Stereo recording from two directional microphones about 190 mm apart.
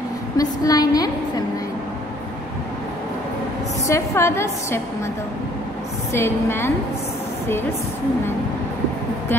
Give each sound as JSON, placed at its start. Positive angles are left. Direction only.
{"t": 0.4, "sound": "a woman's voice", "side_deg": 20}
{"t": 3.8, "sound": "a woman's voice", "side_deg": 15}
{"t": 6.1, "sound": "a woman's voice", "side_deg": 15}